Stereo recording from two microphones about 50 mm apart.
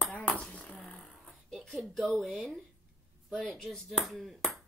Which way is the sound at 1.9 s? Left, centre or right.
Centre.